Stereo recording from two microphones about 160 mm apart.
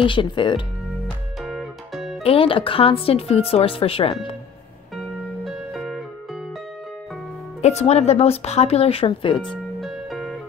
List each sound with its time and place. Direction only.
0.0 s speech: 30° left (ahead or behind)
1.4 s music: centre (ahead or behind)
2.2 s speech: 35° left (ahead or behind)
4.9 s music: centre (ahead or behind)
7.6 s speech: 40° left (ahead or behind)
9.4 s music: centre (ahead or behind)